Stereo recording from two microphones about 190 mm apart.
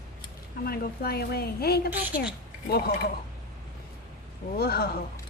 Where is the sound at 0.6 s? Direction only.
55° left (ahead or behind).